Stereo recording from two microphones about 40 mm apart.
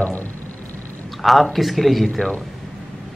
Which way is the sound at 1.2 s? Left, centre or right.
Centre.